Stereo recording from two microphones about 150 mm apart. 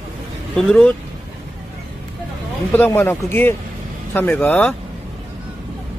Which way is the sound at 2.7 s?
15° left (ahead or behind).